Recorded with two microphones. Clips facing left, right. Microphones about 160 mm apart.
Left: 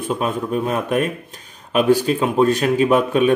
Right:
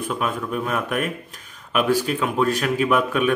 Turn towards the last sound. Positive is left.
turn(degrees=30)  # may be behind; listen again after turning